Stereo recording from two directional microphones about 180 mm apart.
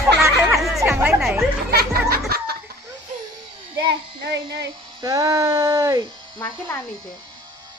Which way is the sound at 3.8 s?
70° right (ahead or behind).